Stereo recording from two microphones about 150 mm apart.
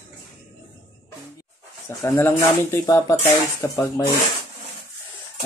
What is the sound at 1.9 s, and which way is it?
Speech, 15° left (ahead or behind).